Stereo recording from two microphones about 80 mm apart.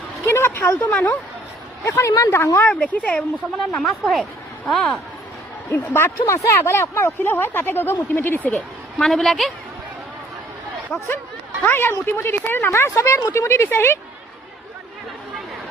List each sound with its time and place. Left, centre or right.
0.3 s a sound: left
0.8 s speech: centre
1.8 s speech: left
2.6 s speech: centre
3.7 s speech: centre
5.7 s speech: left
8.5 s a woman's voice: centre
11.6 s speech: left